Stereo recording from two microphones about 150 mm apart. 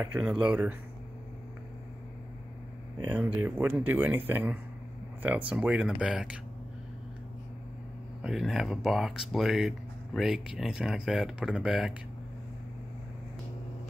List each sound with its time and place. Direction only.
0.0 s speech: 10° right (ahead or behind)
3.2 s speech: 15° right (ahead or behind)
8.2 s speech: centre (ahead or behind)